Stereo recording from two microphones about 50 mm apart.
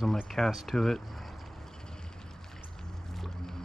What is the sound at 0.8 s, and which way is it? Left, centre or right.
Speech, centre.